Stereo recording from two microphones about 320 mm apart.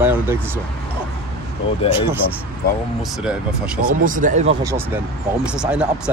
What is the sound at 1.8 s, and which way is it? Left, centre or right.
Speech, centre.